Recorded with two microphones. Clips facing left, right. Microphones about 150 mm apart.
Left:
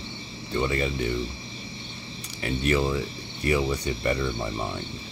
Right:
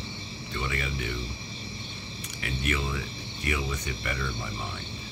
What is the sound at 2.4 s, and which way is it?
Speech, 35° left (ahead or behind).